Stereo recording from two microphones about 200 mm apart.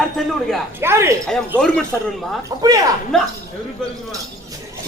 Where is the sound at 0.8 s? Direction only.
10° right (ahead or behind).